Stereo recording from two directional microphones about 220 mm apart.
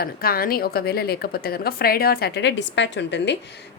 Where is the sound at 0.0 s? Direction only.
45° left (ahead or behind).